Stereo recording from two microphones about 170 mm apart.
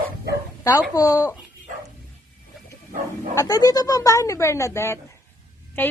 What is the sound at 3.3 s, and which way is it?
Speech, 20° left (ahead or behind).